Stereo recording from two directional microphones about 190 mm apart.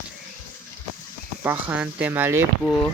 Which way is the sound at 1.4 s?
10° right (ahead or behind).